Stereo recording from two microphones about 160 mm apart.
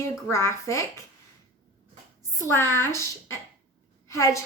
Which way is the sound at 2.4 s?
15° left (ahead or behind).